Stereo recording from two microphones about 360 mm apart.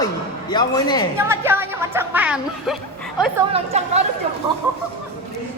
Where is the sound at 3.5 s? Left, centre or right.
Centre.